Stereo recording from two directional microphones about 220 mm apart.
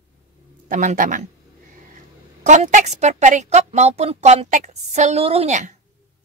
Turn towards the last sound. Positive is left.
turn(degrees=-35)  # may be behind; listen again after turning